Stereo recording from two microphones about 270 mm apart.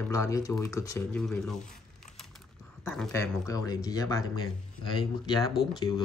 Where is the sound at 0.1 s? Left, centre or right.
Centre.